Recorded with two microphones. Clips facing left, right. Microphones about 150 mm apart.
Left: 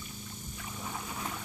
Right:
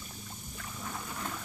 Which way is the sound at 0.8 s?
5° left (ahead or behind).